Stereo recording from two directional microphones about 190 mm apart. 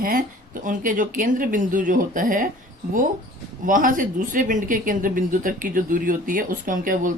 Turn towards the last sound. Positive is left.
turn(degrees=-45)  # may be behind; listen again after turning